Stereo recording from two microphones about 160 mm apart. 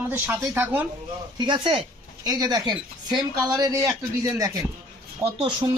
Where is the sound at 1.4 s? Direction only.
30° right (ahead or behind).